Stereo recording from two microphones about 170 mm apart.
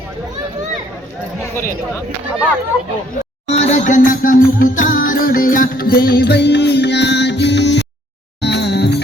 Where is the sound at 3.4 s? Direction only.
40° left (ahead or behind).